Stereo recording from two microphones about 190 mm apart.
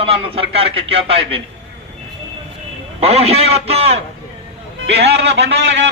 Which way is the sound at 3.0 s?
35° right (ahead or behind).